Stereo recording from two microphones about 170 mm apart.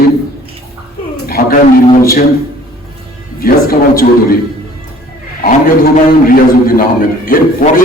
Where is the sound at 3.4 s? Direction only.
60° left (ahead or behind).